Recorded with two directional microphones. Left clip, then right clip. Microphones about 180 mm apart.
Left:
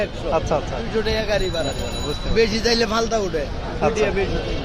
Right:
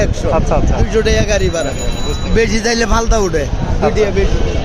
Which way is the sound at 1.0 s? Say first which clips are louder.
Right 7 dB; 65° right (ahead or behind).